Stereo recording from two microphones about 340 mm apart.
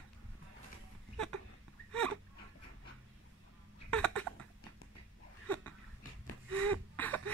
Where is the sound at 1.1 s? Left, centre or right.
Centre.